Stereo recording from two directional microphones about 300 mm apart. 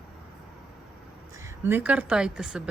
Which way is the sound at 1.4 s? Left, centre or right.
Centre.